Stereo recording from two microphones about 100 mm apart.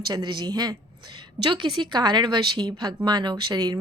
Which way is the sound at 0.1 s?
45° right (ahead or behind).